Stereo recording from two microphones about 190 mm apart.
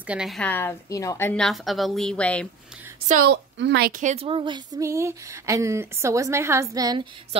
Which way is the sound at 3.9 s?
40° right (ahead or behind).